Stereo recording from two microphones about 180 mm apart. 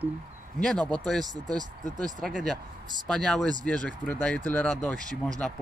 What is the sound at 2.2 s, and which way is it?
Speech, 5° left (ahead or behind).